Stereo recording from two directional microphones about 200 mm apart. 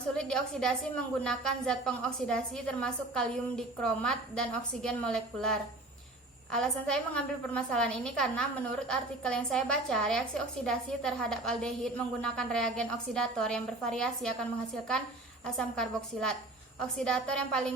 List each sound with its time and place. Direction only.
0.2 s a woman's voice: 5° left (ahead or behind)
15.4 s a woman's voice: 5° left (ahead or behind)